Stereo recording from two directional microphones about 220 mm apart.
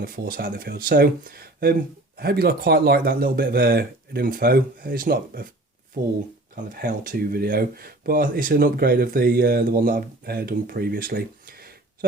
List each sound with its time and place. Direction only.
0.0 s speech: 40° right (ahead or behind)
6.8 s speech: 40° right (ahead or behind)